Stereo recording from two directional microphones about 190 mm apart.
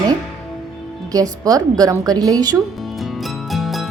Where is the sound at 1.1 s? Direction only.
20° right (ahead or behind).